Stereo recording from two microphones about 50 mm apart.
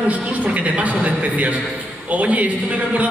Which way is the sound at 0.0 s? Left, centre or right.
Right.